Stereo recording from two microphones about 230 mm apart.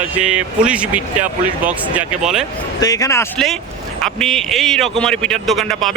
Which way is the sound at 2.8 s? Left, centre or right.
Centre.